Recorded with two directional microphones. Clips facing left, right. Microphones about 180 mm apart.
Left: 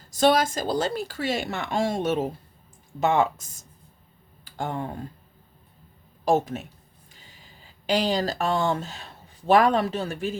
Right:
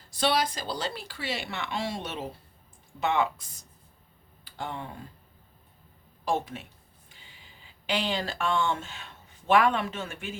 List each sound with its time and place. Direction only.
0.1 s speech: 45° left (ahead or behind)
6.2 s speech: 45° left (ahead or behind)